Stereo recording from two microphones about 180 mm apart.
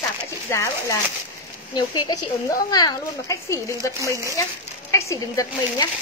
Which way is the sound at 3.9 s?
15° right (ahead or behind).